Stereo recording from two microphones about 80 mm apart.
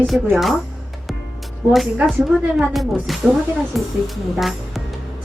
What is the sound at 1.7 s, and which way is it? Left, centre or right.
Speech, centre.